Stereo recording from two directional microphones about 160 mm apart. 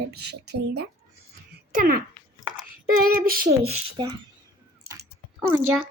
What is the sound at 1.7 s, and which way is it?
Female singing, 65° right (ahead or behind).